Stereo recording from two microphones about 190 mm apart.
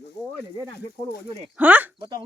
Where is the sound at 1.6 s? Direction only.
10° right (ahead or behind).